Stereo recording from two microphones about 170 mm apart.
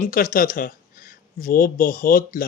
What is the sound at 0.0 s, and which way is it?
A man's voice, 55° left (ahead or behind).